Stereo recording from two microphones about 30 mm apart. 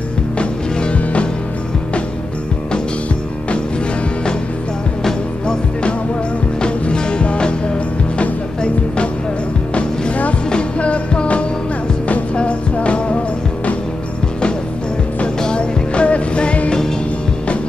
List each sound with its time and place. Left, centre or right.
6.6 s music: left
15.4 s music: left